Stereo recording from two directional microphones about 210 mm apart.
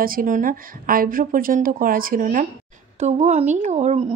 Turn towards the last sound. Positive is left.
turn(degrees=-30)  # may be behind; listen again after turning